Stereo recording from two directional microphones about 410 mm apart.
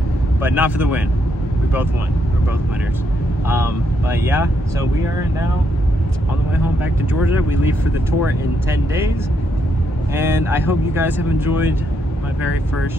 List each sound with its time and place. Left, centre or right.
0.4 s speech: centre
3.4 s speech: centre
8.6 s speech: centre
10.1 s speech: centre